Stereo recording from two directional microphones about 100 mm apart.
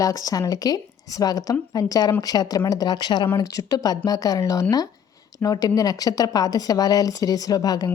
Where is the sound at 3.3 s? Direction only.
35° left (ahead or behind).